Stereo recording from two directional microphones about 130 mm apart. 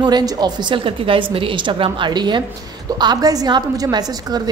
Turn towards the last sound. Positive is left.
turn(degrees=-30)  # may be behind; listen again after turning